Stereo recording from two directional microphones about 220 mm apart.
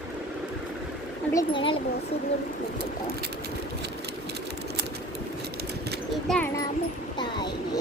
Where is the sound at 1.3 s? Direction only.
20° left (ahead or behind).